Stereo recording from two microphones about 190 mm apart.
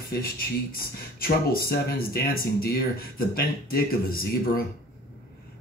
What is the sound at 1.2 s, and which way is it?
Speech, 50° left (ahead or behind).